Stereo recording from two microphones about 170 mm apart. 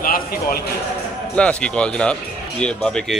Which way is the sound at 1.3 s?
5° left (ahead or behind).